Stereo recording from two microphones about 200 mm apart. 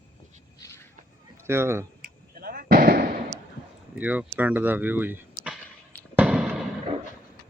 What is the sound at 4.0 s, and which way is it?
Speech, 5° right (ahead or behind).